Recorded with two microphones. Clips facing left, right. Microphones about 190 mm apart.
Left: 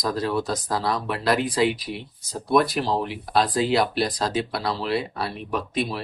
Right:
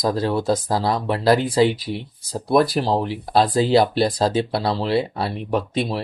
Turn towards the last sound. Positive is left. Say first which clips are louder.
# right 4 dB
turn(degrees=-30)  # may be behind; listen again after turning